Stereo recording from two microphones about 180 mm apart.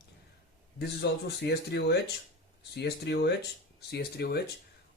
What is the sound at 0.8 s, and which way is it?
Speech, 65° left (ahead or behind).